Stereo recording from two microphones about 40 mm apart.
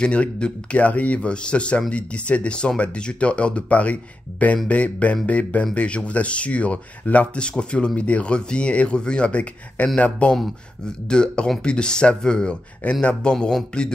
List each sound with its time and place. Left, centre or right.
0.0 s speech: left
7.3 s speech: left
10.9 s speech: left